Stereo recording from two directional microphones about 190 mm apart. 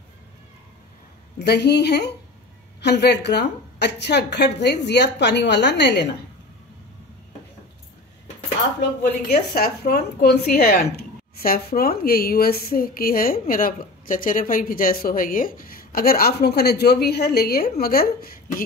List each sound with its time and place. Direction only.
1.4 s a woman's voice: 60° left (ahead or behind)
9.3 s speech: 50° left (ahead or behind)